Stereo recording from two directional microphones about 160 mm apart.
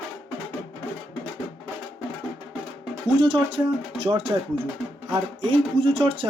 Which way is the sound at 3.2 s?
35° right (ahead or behind).